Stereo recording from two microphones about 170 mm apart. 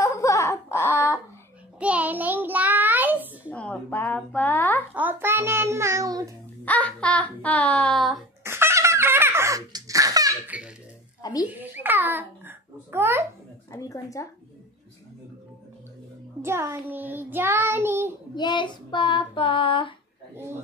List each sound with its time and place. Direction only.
0.0 s a sound: 20° left (ahead or behind)
1.8 s child singing: 10° right (ahead or behind)
3.4 s a sound: 10° left (ahead or behind)
4.9 s a child's voice: 10° right (ahead or behind)
6.6 s a child's voice: 10° left (ahead or behind)
8.5 s baby laughter: 15° right (ahead or behind)
10.5 s a sound: 10° right (ahead or behind)
11.4 s a child's voice: 10° right (ahead or behind)
13.7 s a woman's voice: 20° left (ahead or behind)
16.4 s child singing: 15° right (ahead or behind)
18.3 s child singing: 25° left (ahead or behind)
20.3 s child singing: 15° right (ahead or behind)